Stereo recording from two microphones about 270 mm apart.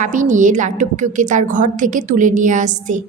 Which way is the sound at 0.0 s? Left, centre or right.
Right.